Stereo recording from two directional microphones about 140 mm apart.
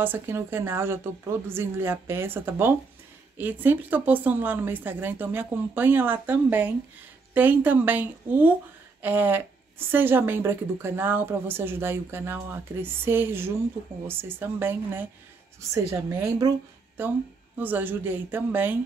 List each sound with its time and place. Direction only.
0.0 s a woman's voice: 15° right (ahead or behind)